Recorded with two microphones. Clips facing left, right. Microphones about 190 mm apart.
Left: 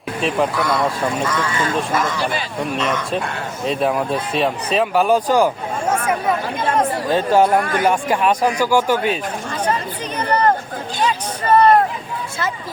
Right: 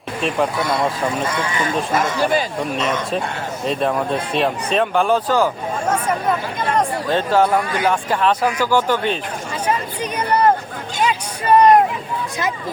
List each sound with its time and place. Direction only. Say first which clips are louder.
0.2 s speech: left 1 dB; centre (ahead or behind)
0.6 s speech: left 1 dB; 20° right (ahead or behind)
2.6 s speech: even; centre (ahead or behind)
5.9 s a sound: left 1 dB; 10° left (ahead or behind)
6.7 s speech: left 1 dB; 10° left (ahead or behind)
7.6 s speech: left 2 dB; 50° left (ahead or behind)
7.9 s speech: even; 15° left (ahead or behind)
10.2 s a sound: right 1 dB; 10° right (ahead or behind)